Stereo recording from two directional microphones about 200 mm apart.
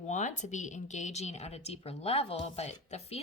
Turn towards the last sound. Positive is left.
turn(degrees=30)  # may be behind; listen again after turning